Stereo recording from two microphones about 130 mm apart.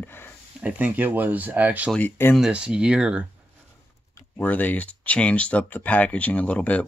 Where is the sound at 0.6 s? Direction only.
15° right (ahead or behind).